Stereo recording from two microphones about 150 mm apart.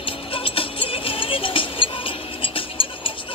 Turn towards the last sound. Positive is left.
turn(degrees=35)  # may be behind; listen again after turning